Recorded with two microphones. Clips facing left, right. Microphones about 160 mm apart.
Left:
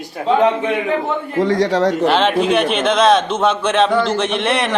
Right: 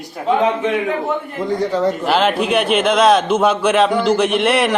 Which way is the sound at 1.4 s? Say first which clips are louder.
Left 3 dB; 90° left.